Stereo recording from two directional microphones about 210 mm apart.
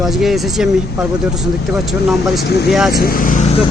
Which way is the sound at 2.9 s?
45° left (ahead or behind).